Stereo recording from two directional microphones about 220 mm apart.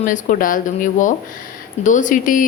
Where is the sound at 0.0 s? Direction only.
35° left (ahead or behind).